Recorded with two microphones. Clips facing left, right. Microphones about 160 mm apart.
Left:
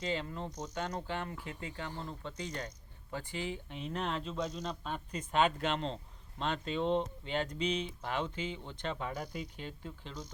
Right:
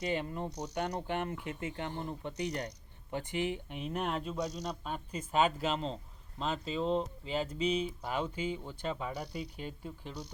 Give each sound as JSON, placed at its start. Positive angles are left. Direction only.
{"t": 0.0, "sound": "speech", "side_deg": -15}
{"t": 2.3, "sound": "speech", "side_deg": -70}
{"t": 3.1, "sound": "speech", "side_deg": -20}